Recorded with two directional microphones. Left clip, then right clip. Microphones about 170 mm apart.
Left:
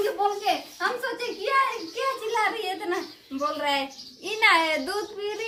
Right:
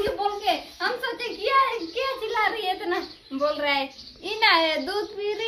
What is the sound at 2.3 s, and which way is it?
A child's voice, 10° left (ahead or behind).